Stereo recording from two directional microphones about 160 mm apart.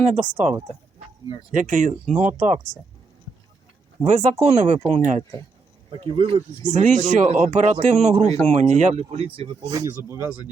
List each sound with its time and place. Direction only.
0.0 s speech: 50° right (ahead or behind)
1.5 s speech: 55° right (ahead or behind)
4.0 s speech: 50° right (ahead or behind)
6.0 s speech: 35° right (ahead or behind)
6.7 s speech: 50° right (ahead or behind); by 9.6 s 35° right (ahead or behind)
9.7 s speech: 20° right (ahead or behind)